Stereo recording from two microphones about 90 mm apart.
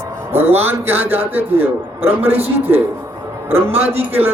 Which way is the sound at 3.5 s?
25° right (ahead or behind).